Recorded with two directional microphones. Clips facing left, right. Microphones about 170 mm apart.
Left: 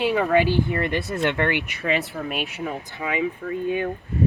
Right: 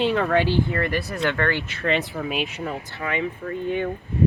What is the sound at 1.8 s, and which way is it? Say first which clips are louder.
Speech: right 2 dB; centre (ahead or behind).